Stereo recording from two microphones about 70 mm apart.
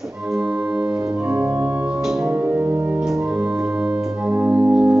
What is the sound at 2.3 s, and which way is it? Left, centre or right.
Music, right.